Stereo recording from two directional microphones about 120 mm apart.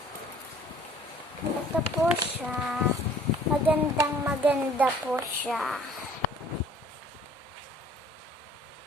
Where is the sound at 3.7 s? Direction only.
15° right (ahead or behind).